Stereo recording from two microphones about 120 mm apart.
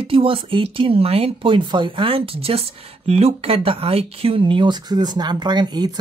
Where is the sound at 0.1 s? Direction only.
50° right (ahead or behind).